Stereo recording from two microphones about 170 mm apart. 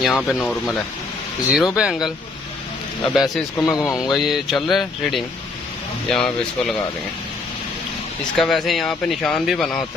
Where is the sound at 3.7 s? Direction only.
20° left (ahead or behind).